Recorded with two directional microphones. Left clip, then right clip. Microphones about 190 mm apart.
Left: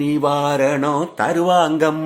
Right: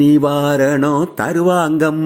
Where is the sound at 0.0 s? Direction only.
25° right (ahead or behind).